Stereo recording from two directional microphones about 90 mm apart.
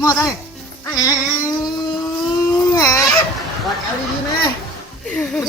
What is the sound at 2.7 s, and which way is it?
Speech, 35° left (ahead or behind).